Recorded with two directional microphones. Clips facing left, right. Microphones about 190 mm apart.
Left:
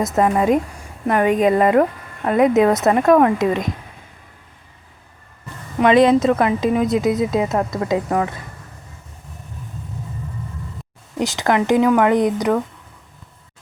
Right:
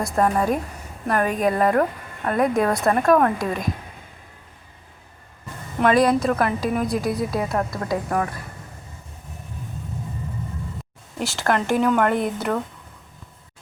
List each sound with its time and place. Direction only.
0.3 s a woman's voice: 20° left (ahead or behind)
5.8 s a woman's voice: 20° left (ahead or behind)
11.2 s speech: 20° left (ahead or behind)